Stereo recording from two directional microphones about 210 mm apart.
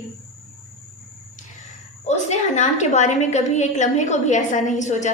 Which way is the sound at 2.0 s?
35° left (ahead or behind).